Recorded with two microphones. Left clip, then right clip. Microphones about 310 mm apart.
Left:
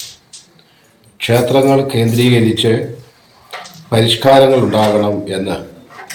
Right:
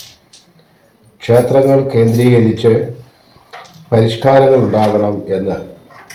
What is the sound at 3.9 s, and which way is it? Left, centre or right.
Speech, centre.